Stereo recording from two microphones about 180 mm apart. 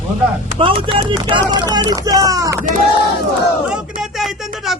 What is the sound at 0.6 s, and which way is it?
Speech, 30° right (ahead or behind).